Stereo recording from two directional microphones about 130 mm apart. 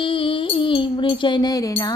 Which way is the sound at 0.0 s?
45° left (ahead or behind).